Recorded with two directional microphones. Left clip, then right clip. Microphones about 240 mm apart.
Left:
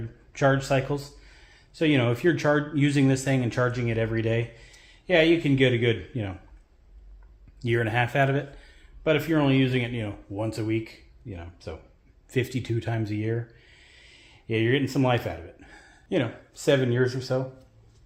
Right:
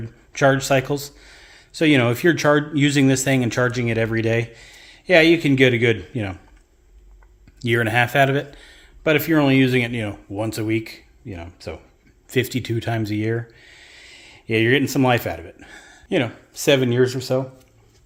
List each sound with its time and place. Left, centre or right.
0.3 s speech: right
7.6 s speech: right